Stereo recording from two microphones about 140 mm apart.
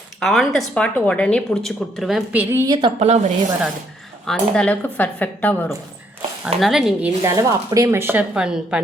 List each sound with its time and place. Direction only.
0.2 s a woman's voice: centre (ahead or behind)
2.3 s a woman's voice: 15° right (ahead or behind)
2.6 s a woman's voice: 35° right (ahead or behind)
3.0 s speech: 55° right (ahead or behind)
4.3 s speech: 5° left (ahead or behind)
6.6 s a woman's voice: centre (ahead or behind)
7.2 s a woman's voice: 20° right (ahead or behind); by 8.8 s 5° right (ahead or behind)